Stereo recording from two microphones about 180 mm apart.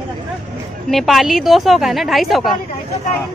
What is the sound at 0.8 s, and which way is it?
Speech, centre (ahead or behind).